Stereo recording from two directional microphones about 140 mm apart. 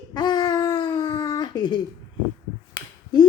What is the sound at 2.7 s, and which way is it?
Finger snapping, 30° left (ahead or behind).